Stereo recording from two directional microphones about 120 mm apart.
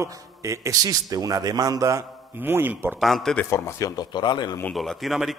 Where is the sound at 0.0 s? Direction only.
25° right (ahead or behind).